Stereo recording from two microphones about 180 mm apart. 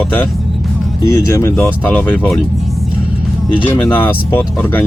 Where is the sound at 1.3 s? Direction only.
15° left (ahead or behind).